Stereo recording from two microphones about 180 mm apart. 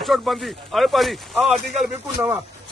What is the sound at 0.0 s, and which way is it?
Speech, centre (ahead or behind).